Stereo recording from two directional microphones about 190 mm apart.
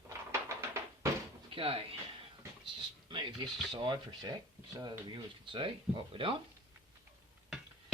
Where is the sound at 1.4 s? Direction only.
30° right (ahead or behind).